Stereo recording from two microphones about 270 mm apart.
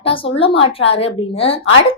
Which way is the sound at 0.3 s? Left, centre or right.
Centre.